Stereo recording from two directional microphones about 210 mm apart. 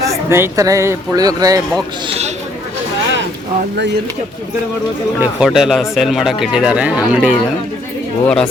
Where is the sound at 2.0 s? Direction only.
30° right (ahead or behind).